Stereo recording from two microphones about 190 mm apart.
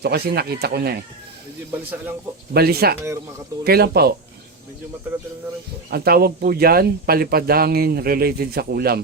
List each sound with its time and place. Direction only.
0.0 s speech: 55° right (ahead or behind)
1.7 s a man's voice: 10° right (ahead or behind)
2.5 s speech: 55° right (ahead or behind)
5.9 s speech: 55° right (ahead or behind)